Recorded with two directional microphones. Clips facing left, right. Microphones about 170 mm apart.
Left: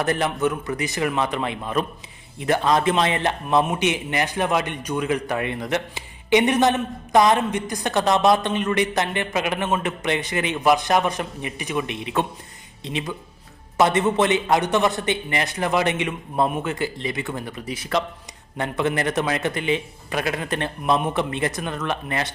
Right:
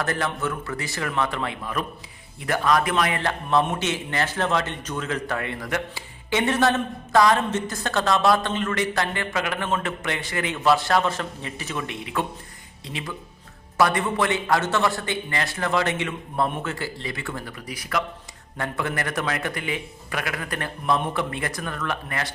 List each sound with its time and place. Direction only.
0.0 s a man's voice: 20° left (ahead or behind)